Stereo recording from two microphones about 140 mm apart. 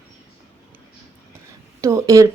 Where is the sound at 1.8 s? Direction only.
25° right (ahead or behind).